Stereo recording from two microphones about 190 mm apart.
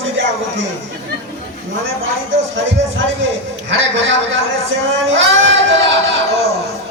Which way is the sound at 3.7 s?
75° right (ahead or behind).